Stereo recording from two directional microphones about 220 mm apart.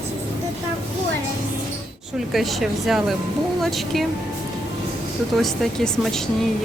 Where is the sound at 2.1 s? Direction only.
Centre (ahead or behind).